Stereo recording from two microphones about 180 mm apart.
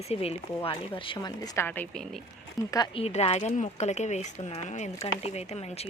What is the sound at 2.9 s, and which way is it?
Speech, 35° left (ahead or behind).